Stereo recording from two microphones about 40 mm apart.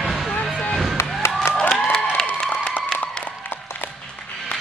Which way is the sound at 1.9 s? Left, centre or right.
Centre.